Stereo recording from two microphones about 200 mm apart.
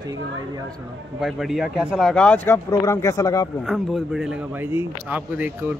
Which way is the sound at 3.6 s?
Centre (ahead or behind).